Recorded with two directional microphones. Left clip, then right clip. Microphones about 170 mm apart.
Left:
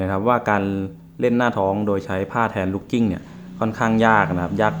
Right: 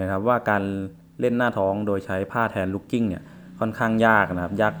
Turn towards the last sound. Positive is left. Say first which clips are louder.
# left 3 dB
turn(degrees=-20)  # may be behind; listen again after turning